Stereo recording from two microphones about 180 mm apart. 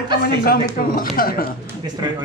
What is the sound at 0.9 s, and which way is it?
Speech, 50° left (ahead or behind).